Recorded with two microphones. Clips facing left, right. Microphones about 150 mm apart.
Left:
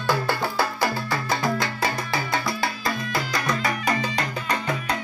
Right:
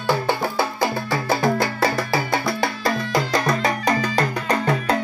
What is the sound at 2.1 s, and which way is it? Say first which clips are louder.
Music: right 4 dB; 30° right (ahead or behind).